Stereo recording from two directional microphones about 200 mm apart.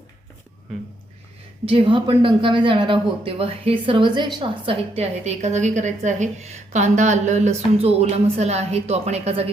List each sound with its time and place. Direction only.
1.6 s a woman's voice: 25° right (ahead or behind)